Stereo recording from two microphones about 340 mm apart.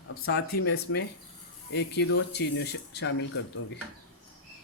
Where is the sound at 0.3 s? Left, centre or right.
Left.